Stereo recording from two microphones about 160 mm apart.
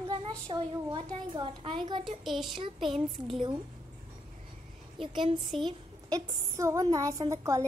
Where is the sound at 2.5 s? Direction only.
30° right (ahead or behind).